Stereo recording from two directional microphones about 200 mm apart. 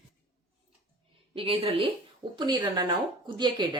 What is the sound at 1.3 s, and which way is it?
Speech, 30° right (ahead or behind).